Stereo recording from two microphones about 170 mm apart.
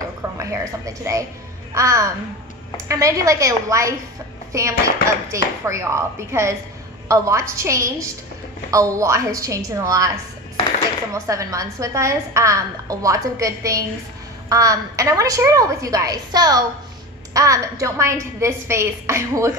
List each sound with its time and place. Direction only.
0.4 s a woman's voice: 20° right (ahead or behind)
11.2 s a woman's voice: 20° right (ahead or behind)